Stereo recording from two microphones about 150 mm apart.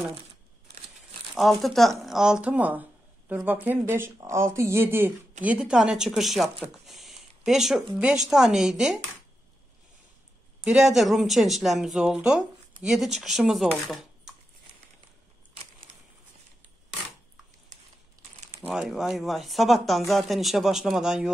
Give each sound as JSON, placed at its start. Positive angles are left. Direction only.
{"t": 1.3, "sound": "speech", "side_deg": 0}
{"t": 10.6, "sound": "speech", "side_deg": -5}
{"t": 13.8, "sound": "dishes", "side_deg": 0}
{"t": 18.7, "sound": "speech", "side_deg": -5}